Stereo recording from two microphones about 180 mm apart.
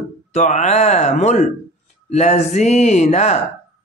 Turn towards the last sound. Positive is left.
turn(degrees=40)  # may be behind; listen again after turning